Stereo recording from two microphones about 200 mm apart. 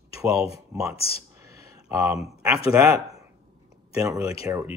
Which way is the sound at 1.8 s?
15° right (ahead or behind).